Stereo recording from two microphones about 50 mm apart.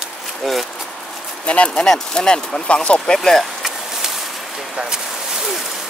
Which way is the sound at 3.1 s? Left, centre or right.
Centre.